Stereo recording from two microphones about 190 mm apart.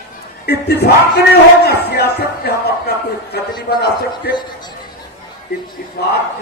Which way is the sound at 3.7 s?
55° left (ahead or behind).